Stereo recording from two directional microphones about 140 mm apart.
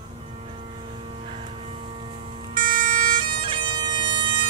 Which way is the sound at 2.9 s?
35° right (ahead or behind).